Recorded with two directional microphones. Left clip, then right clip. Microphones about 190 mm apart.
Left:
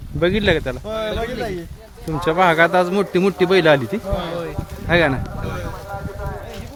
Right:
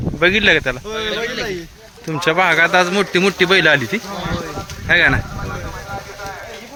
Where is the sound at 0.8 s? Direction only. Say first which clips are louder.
Right 2 dB; 65° left (ahead or behind).